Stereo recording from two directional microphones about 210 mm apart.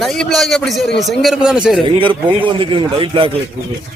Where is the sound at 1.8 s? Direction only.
25° right (ahead or behind).